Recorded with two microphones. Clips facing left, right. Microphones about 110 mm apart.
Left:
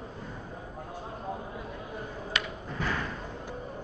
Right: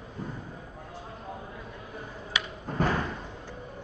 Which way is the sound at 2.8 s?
40° right (ahead or behind).